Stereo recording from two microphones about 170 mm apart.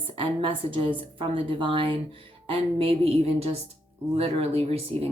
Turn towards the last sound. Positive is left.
turn(degrees=-35)  # may be behind; listen again after turning